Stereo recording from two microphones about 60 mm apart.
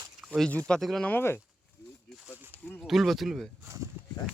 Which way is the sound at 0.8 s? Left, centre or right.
Centre.